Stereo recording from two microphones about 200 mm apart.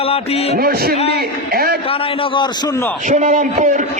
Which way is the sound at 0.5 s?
50° right (ahead or behind).